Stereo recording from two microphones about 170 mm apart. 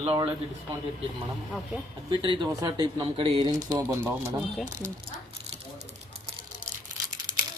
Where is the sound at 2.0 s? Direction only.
30° right (ahead or behind).